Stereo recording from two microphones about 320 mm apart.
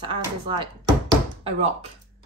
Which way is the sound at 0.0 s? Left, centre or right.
Centre.